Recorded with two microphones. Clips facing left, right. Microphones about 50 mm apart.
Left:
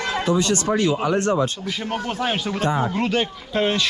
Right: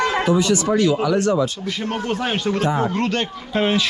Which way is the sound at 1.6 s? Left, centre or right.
Centre.